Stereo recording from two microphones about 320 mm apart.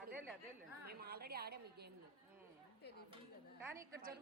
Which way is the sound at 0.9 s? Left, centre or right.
Right.